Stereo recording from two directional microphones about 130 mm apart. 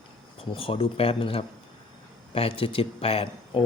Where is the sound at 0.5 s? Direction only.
45° left (ahead or behind).